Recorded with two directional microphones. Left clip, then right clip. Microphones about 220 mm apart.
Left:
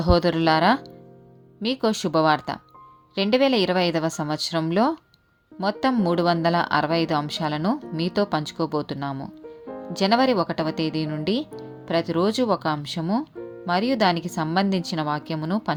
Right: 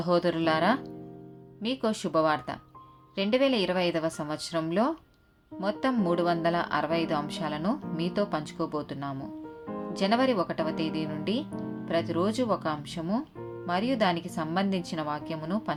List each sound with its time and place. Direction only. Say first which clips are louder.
0.0 s speech: left 6 dB; 40° left (ahead or behind)